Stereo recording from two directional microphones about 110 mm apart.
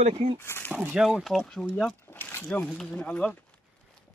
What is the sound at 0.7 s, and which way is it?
Speech, 20° right (ahead or behind).